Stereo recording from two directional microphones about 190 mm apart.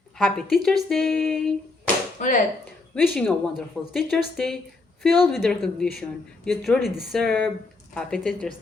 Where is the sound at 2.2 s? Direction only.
40° left (ahead or behind).